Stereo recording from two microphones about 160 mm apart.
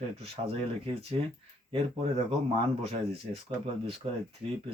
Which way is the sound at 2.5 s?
40° right (ahead or behind).